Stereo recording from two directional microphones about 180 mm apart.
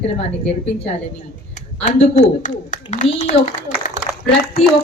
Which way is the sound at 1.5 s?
40° left (ahead or behind).